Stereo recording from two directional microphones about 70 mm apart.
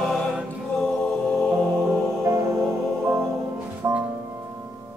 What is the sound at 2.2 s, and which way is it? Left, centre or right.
Music, right.